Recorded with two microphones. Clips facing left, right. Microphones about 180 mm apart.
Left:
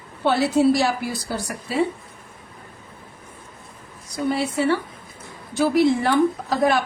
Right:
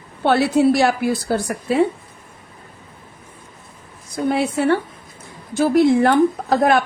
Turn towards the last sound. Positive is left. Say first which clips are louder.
# right 4 dB
turn(degrees=-55)  # may be behind; listen again after turning